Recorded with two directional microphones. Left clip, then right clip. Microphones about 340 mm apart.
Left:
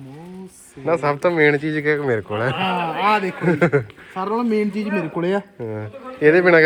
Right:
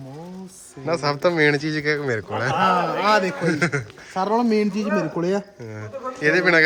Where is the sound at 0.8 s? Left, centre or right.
Centre.